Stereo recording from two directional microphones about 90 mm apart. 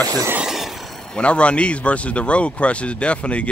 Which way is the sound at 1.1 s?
10° left (ahead or behind).